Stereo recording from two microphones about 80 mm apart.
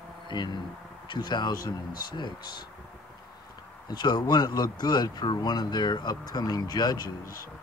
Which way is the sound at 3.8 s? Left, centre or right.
Left.